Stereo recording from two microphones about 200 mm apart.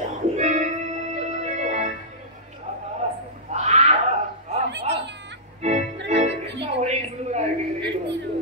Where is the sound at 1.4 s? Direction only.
35° right (ahead or behind).